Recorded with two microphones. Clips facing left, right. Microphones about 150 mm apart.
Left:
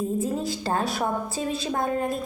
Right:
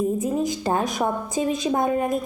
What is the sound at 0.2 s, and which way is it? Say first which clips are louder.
A woman's voice: right 3 dB; 20° right (ahead or behind).